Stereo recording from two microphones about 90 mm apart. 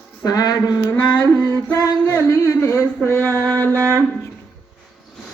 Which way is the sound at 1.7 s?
35° left (ahead or behind).